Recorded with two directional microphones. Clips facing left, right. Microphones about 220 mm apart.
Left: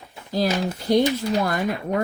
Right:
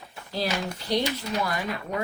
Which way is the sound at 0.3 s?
45° left (ahead or behind).